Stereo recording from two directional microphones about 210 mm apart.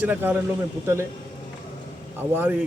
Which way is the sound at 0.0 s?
10° right (ahead or behind).